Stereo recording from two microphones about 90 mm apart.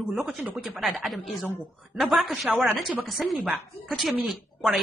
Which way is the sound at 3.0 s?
Centre (ahead or behind).